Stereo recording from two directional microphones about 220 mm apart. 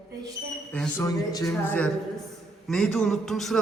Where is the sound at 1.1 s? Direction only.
15° left (ahead or behind).